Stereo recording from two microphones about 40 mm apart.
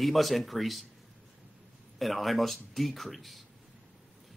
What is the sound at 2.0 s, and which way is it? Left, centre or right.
Speech, centre.